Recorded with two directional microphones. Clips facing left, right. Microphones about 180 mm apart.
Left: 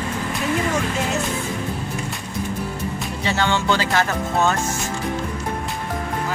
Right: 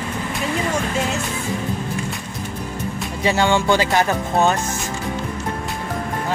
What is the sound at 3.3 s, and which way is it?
Speech, 10° right (ahead or behind).